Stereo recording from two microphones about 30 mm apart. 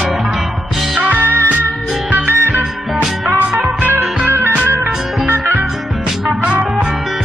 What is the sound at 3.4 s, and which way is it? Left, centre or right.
Music, right.